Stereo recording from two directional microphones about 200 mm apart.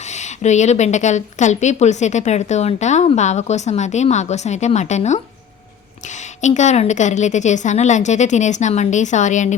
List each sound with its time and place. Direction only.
0.1 s a woman's voice: 35° left (ahead or behind)
6.4 s a woman's voice: 35° left (ahead or behind)